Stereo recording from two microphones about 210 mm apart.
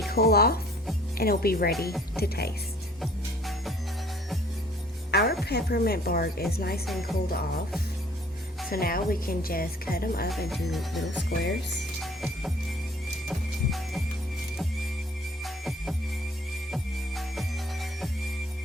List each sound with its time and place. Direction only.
0.1 s speech: 50° left (ahead or behind)
3.0 s music: centre (ahead or behind)
5.1 s music: 50° left (ahead or behind)
5.5 s speech: 50° left (ahead or behind)
8.7 s speech: 45° left (ahead or behind)
10.5 s music: centre (ahead or behind)
11.3 s speech: 55° left (ahead or behind)
12.0 s music: centre (ahead or behind)
13.7 s music: centre (ahead or behind)
15.4 s music: centre (ahead or behind)